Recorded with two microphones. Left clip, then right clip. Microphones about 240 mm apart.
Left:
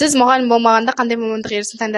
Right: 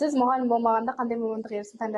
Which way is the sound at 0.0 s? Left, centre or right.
Left.